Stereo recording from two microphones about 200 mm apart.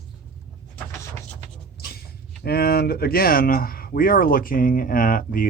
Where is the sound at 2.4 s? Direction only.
50° left (ahead or behind).